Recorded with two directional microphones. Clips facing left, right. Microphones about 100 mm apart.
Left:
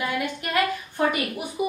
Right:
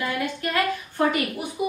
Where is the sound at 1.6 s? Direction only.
20° left (ahead or behind).